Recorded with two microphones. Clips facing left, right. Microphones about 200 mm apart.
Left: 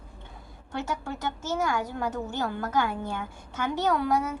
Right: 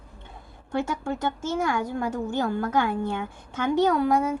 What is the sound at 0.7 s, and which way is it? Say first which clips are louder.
A woman's voice: right 5 dB; 50° right (ahead or behind).